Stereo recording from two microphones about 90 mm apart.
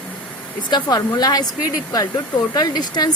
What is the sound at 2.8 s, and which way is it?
Speech, 50° left (ahead or behind).